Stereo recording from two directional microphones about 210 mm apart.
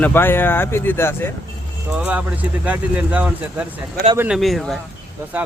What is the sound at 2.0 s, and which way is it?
Speech, 5° right (ahead or behind).